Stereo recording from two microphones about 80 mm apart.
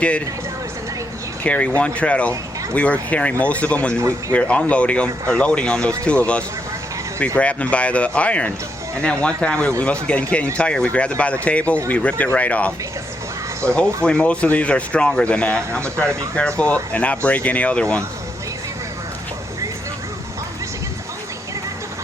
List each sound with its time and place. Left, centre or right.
1.5 s speech: centre